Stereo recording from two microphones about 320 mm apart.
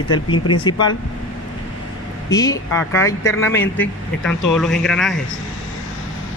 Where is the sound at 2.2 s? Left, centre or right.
Centre.